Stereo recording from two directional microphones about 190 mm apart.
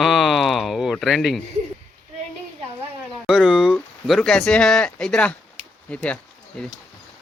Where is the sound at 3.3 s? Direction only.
5° right (ahead or behind).